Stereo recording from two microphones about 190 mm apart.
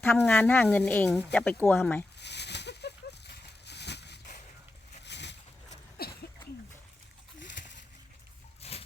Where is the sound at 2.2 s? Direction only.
65° left (ahead or behind).